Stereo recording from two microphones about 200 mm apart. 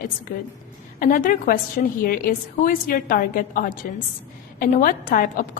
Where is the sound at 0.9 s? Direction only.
45° left (ahead or behind).